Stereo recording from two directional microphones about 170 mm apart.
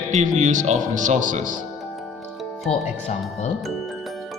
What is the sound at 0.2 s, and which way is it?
Speech, 45° right (ahead or behind).